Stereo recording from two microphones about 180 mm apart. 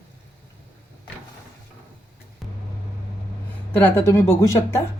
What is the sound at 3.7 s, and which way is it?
A woman's voice, 10° left (ahead or behind).